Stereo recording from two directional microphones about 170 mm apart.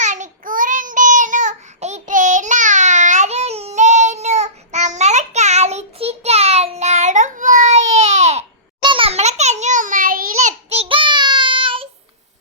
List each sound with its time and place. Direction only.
0.0 s child singing: 45° right (ahead or behind)
8.8 s a sound: 30° right (ahead or behind); by 10.5 s 55° right (ahead or behind)
10.7 s child singing: 35° right (ahead or behind)